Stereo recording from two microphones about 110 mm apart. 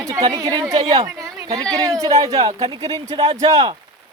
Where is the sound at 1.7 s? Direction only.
30° right (ahead or behind).